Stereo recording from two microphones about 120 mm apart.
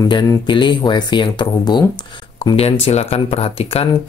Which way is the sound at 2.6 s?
55° left (ahead or behind).